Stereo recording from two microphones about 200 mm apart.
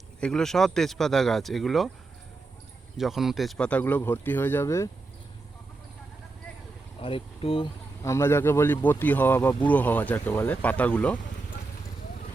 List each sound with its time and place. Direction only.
0.2 s speech: 5° left (ahead or behind)
3.0 s speech: centre (ahead or behind); by 4.9 s 15° left (ahead or behind)
7.0 s speech: 25° left (ahead or behind)
8.0 s speech: 15° left (ahead or behind)